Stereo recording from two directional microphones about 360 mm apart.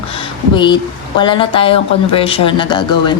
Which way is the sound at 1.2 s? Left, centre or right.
Centre.